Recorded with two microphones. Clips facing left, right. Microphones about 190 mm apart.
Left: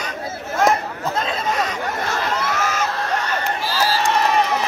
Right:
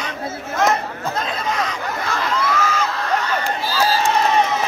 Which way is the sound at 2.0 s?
45° left (ahead or behind).